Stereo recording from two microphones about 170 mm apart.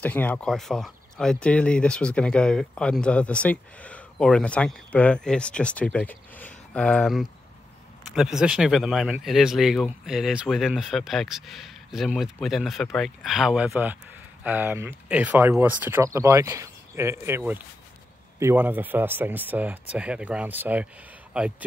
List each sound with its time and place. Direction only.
0.0 s speech: 10° left (ahead or behind); by 21.6 s 5° right (ahead or behind)